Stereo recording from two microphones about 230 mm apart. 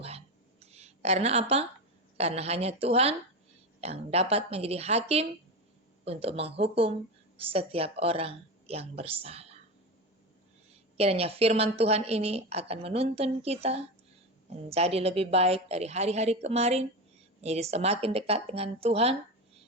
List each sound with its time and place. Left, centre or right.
0.6 s a sound: right
2.1 s a woman's voice: right
10.9 s a woman's voice: right